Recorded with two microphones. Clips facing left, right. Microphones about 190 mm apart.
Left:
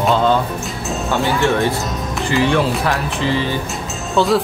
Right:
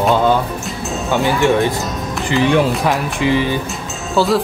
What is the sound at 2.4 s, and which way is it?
Speech, 15° right (ahead or behind).